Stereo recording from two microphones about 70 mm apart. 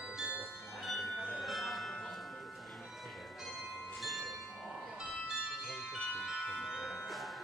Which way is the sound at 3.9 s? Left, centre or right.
Centre.